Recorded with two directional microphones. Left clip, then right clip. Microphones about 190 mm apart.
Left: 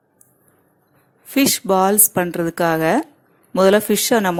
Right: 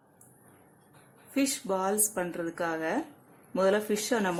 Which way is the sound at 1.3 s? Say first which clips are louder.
Left 14 dB; 40° left (ahead or behind).